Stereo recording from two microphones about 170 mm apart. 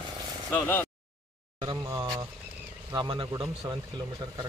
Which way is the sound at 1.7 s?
20° right (ahead or behind).